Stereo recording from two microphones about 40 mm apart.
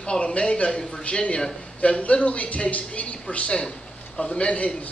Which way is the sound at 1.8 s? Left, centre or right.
Left.